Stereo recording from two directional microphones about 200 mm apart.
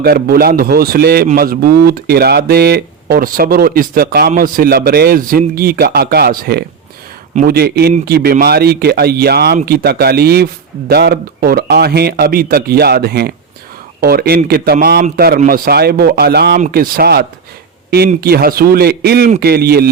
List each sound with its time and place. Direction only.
0.0 s speech: 50° right (ahead or behind)